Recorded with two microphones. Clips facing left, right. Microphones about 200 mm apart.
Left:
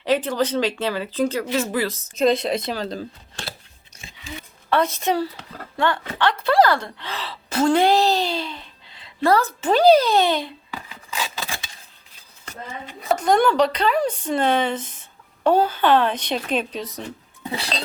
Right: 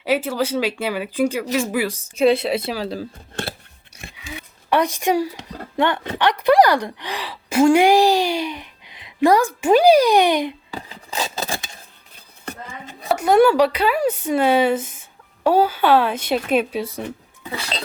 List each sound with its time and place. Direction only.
0.0 s a woman's voice: 10° right (ahead or behind)
4.0 s a sound: 60° right (ahead or behind)
4.7 s a woman's voice: 15° right (ahead or behind)
10.7 s a sound: 30° right (ahead or behind)
12.1 s chopping: 55° right (ahead or behind)
13.1 s a woman's voice: 5° right (ahead or behind)